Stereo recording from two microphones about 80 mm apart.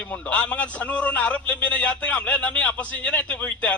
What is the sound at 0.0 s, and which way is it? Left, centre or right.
A man's voice, centre.